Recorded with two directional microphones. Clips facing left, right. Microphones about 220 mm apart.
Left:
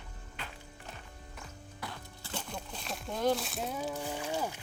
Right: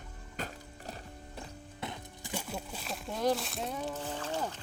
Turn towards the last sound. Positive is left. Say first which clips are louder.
# left 1 dB
turn(degrees=10)  # may be behind; listen again after turning